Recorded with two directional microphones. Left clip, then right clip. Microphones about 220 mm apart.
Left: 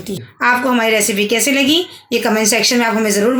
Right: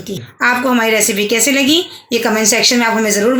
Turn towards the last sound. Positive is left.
turn(degrees=5)  # may be behind; listen again after turning